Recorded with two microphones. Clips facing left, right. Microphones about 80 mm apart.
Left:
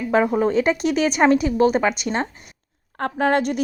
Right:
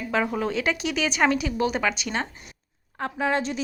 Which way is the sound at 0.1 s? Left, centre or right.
Left.